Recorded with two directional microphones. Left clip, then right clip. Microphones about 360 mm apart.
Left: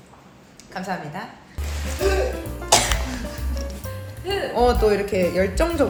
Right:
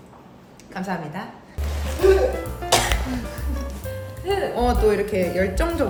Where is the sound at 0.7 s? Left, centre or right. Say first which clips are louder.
Even; centre.